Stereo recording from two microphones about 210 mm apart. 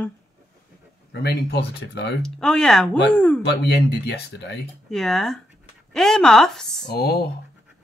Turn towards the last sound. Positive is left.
turn(degrees=50)  # may be behind; listen again after turning